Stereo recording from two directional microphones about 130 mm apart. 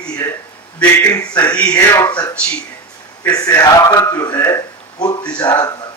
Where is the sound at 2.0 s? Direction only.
30° left (ahead or behind).